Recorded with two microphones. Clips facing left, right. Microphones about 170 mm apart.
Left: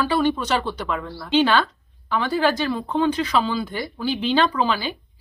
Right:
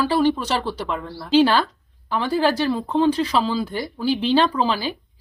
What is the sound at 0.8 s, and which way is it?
Speech, 5° right (ahead or behind).